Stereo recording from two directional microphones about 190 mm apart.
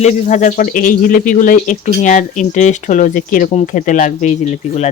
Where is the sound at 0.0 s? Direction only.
40° left (ahead or behind).